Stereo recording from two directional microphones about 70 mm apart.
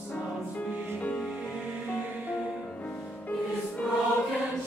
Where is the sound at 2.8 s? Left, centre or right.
Left.